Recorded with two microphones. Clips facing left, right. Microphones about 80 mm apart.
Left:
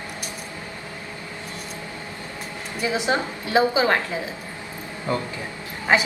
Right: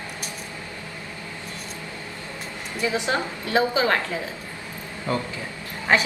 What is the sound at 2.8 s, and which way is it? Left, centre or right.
A woman's voice, left.